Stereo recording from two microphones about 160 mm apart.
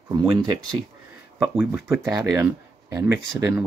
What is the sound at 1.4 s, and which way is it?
Speech, 10° right (ahead or behind).